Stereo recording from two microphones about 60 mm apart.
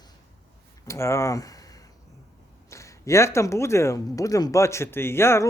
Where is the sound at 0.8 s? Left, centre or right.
Left.